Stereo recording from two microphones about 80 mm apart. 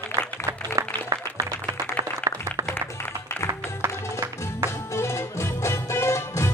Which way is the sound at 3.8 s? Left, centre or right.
Right.